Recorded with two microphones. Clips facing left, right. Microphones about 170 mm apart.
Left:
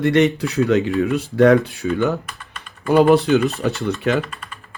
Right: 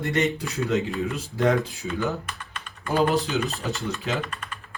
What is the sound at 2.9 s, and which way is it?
Speech, 65° left (ahead or behind).